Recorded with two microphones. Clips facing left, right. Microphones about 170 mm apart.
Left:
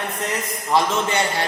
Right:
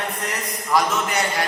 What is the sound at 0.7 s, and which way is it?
Speech, 25° left (ahead or behind).